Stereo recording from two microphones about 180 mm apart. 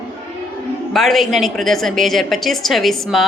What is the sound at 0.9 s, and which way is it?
A woman's voice, centre (ahead or behind).